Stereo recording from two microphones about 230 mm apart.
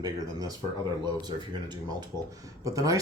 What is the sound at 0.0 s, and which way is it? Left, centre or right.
Speech, centre.